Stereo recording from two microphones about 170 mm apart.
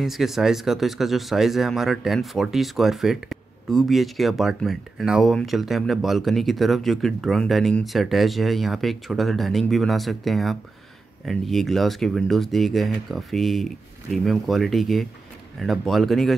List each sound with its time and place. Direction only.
0.0 s speech: centre (ahead or behind)